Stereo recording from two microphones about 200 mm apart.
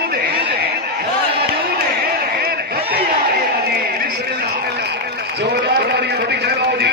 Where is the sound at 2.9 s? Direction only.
50° right (ahead or behind).